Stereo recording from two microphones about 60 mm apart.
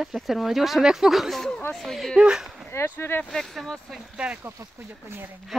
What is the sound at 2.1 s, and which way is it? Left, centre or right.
Speech, centre.